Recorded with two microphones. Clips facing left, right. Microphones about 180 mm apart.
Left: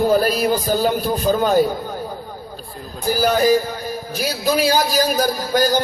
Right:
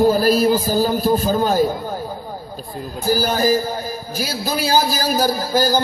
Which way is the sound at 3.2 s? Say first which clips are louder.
Left 4 dB; 40° right (ahead or behind).